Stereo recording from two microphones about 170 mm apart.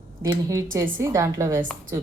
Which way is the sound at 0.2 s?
20° right (ahead or behind).